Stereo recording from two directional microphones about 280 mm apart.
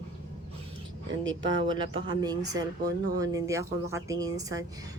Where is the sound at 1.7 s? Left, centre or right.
Centre.